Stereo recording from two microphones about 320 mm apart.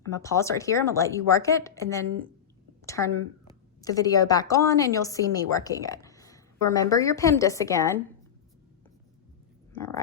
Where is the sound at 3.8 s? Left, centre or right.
Centre.